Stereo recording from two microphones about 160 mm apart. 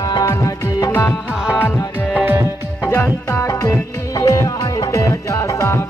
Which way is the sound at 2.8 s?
15° left (ahead or behind).